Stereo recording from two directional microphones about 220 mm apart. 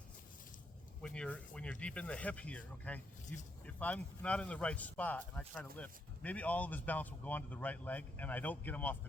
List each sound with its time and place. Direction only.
1.0 s speech: 5° left (ahead or behind)